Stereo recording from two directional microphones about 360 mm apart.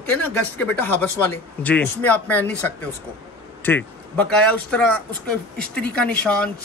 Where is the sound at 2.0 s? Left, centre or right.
Centre.